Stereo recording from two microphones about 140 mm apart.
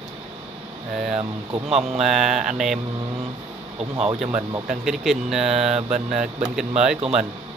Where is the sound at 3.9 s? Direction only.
50° right (ahead or behind).